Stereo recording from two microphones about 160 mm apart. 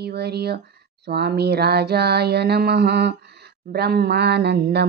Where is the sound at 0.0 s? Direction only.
90° right.